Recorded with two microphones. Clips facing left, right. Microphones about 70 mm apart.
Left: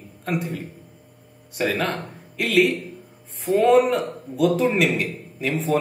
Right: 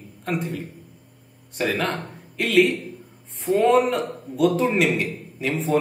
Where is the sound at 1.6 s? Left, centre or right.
Centre.